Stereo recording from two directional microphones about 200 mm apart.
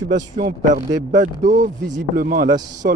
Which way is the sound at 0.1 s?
40° right (ahead or behind).